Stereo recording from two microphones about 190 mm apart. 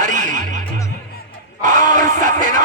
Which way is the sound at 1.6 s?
40° right (ahead or behind).